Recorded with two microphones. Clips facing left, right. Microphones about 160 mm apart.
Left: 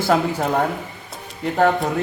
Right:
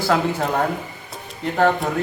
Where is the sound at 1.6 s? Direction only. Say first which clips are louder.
Left 1 dB; 10° left (ahead or behind).